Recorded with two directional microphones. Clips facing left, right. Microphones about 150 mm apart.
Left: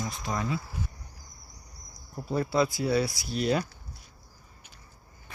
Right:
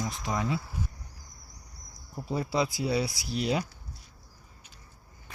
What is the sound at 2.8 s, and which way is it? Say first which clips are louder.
Speech: left 2 dB; 15° right (ahead or behind).